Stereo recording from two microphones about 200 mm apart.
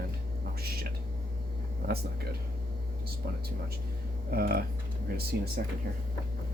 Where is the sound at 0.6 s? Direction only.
50° right (ahead or behind).